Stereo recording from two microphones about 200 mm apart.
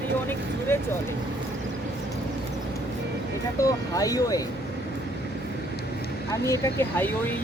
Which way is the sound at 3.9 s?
15° left (ahead or behind).